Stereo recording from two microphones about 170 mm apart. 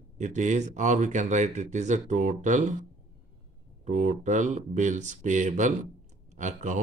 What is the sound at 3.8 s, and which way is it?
Speech, 45° right (ahead or behind).